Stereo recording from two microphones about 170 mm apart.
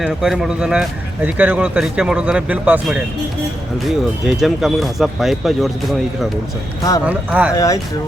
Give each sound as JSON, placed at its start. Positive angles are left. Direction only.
{"t": 0.0, "sound": "speech", "side_deg": -5}
{"t": 7.0, "sound": "speech", "side_deg": -10}
{"t": 7.5, "sound": "speech", "side_deg": 20}